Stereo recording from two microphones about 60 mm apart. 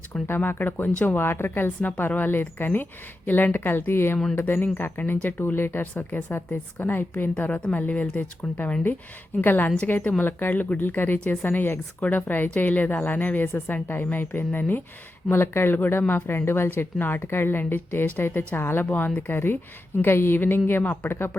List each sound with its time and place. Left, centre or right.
0.1 s a woman's voice: left